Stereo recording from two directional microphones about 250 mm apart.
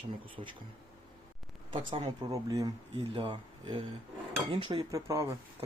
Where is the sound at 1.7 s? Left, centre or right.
Centre.